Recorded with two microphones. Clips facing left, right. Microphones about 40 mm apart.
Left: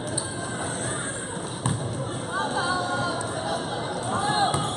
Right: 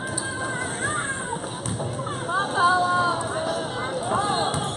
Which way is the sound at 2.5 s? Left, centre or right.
Centre.